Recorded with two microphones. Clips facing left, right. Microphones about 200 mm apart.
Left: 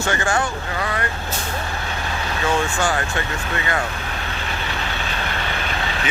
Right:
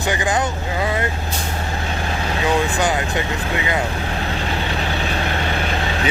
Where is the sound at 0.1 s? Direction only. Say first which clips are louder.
Right 2 dB; 15° right (ahead or behind).